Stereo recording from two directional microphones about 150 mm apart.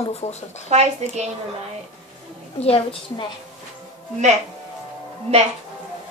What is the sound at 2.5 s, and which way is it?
Speech, 40° left (ahead or behind).